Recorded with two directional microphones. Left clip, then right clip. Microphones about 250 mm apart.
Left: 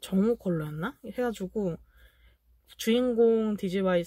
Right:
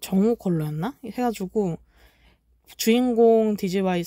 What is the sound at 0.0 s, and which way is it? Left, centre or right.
Speech, right.